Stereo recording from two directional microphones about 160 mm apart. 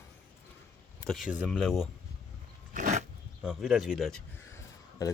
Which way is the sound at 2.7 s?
50° right (ahead or behind).